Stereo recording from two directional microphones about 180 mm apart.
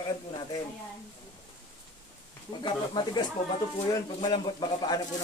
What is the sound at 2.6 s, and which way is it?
Speech, 25° left (ahead or behind).